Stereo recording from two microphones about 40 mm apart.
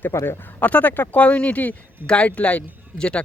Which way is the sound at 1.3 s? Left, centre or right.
Left.